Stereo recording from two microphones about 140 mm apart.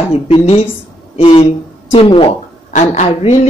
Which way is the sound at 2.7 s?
55° left (ahead or behind).